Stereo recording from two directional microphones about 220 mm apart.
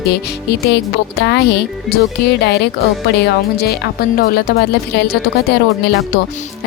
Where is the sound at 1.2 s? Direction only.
50° left (ahead or behind).